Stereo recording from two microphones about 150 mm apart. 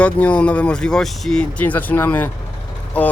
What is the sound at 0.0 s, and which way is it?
Speech, 10° left (ahead or behind).